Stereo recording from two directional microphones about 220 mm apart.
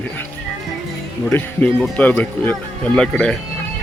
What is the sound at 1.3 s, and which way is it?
Speech, 5° left (ahead or behind).